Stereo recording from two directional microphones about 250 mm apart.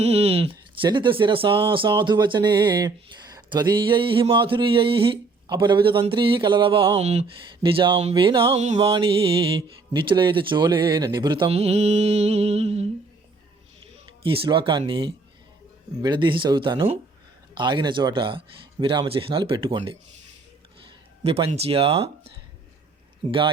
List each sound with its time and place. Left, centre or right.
0.0 s speech: right
14.2 s speech: right
21.2 s speech: right